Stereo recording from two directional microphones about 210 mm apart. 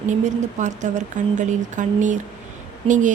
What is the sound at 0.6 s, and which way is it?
Speech, 35° right (ahead or behind).